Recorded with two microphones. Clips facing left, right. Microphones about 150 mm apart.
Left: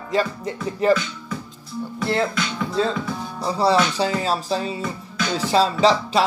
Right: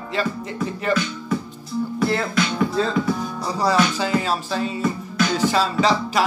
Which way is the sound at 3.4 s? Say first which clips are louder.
Left 2 dB; 30° left (ahead or behind).